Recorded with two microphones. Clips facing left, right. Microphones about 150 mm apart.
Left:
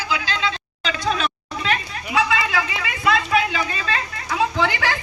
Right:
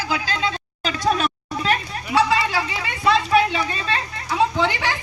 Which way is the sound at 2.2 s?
35° right (ahead or behind).